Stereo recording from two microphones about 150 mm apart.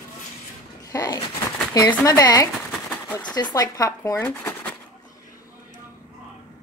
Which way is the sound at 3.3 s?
25° left (ahead or behind).